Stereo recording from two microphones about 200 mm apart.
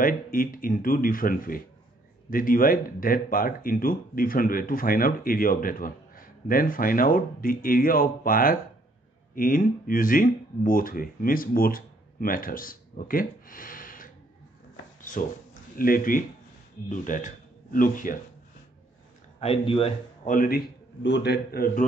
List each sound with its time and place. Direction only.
0.0 s speech: 45° left (ahead or behind)
15.0 s a sound: 40° left (ahead or behind)
15.8 s speech: 45° left (ahead or behind)
19.4 s speech: 30° left (ahead or behind)
20.2 s speech: 45° left (ahead or behind)